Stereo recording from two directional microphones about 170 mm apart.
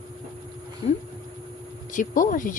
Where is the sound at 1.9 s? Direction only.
50° left (ahead or behind).